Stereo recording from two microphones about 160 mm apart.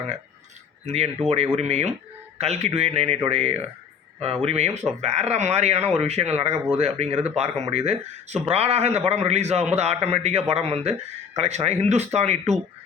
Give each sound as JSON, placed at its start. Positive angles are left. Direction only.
{"t": 0.9, "sound": "speech", "side_deg": -40}